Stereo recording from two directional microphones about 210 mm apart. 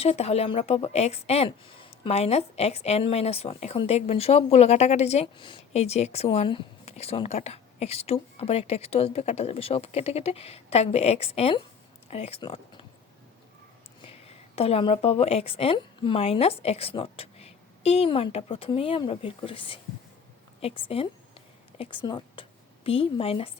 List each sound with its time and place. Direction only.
0.0 s a woman's voice: 30° left (ahead or behind)
14.0 s a woman's voice: 30° left (ahead or behind)